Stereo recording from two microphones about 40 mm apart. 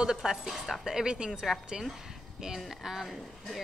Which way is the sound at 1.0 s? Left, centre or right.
Right.